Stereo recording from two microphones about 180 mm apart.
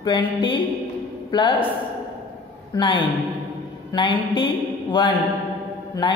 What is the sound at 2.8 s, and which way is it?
A woman's voice, 25° left (ahead or behind).